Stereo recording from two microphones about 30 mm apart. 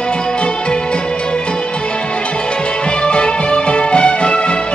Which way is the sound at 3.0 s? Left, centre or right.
Left.